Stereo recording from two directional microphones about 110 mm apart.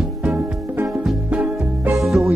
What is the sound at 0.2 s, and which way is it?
Music, 15° right (ahead or behind).